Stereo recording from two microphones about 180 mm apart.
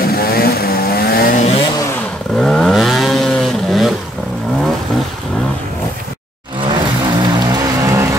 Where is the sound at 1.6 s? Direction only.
20° left (ahead or behind).